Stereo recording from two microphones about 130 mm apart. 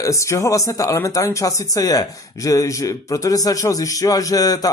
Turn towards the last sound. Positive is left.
turn(degrees=30)  # may be behind; listen again after turning